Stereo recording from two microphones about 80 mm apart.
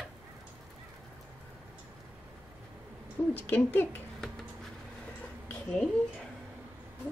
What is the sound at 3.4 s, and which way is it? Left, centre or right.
Speech, left.